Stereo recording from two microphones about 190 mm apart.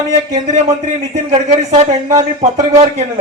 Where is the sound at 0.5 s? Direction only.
35° right (ahead or behind).